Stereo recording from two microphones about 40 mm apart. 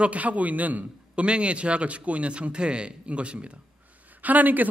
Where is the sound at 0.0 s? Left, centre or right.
Right.